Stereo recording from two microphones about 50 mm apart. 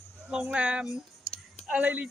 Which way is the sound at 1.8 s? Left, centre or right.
Right.